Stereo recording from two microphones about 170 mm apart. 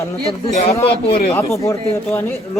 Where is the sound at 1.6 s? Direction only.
15° left (ahead or behind).